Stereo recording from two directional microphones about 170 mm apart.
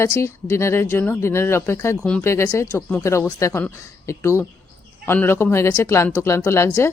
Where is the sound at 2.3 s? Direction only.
15° left (ahead or behind).